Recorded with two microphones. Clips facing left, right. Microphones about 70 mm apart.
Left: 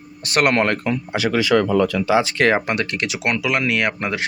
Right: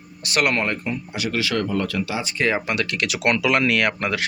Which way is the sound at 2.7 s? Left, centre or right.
Left.